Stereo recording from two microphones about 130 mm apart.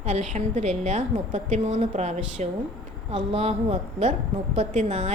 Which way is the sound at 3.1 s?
50° right (ahead or behind).